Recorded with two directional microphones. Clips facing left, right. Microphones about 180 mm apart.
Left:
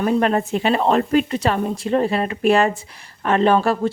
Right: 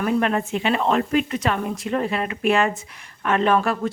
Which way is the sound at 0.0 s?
35° left (ahead or behind).